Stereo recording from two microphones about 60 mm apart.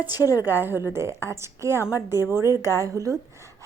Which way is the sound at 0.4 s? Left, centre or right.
Right.